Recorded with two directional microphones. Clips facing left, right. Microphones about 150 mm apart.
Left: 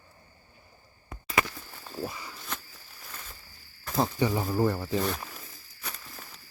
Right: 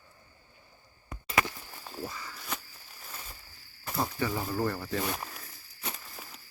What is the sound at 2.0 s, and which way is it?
Walk, 20° left (ahead or behind).